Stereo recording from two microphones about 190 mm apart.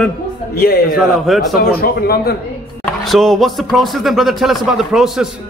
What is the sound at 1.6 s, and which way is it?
Speech, 55° left (ahead or behind).